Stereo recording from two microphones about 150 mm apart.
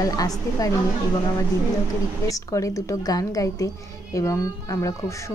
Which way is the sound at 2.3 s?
20° left (ahead or behind).